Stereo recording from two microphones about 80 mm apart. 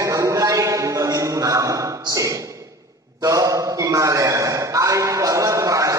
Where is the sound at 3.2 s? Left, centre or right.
Right.